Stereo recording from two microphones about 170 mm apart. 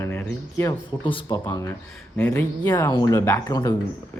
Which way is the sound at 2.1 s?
5° left (ahead or behind).